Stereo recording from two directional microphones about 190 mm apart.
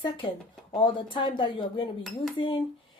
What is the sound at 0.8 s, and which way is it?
Speech, 25° left (ahead or behind).